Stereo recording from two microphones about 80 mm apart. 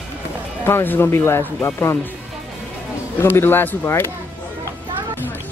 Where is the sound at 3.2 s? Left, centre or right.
Left.